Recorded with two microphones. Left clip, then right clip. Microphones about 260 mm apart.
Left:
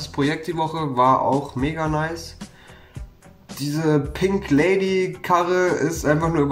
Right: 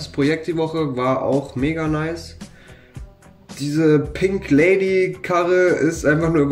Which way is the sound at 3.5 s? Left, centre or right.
Centre.